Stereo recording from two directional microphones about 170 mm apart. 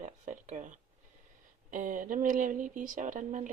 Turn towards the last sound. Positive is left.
turn(degrees=-50)  # may be behind; listen again after turning